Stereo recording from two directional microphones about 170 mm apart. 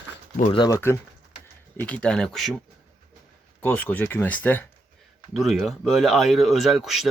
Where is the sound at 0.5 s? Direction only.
25° left (ahead or behind).